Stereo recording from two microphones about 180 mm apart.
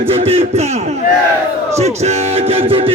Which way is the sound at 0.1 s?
35° right (ahead or behind).